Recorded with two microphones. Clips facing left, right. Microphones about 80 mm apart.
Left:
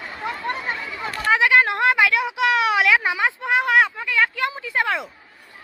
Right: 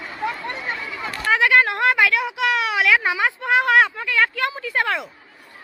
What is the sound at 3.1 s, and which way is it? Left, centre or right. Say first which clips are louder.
Speech: right 1 dB; centre.